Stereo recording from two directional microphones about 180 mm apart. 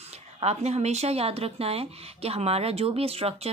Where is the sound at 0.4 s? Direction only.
35° right (ahead or behind).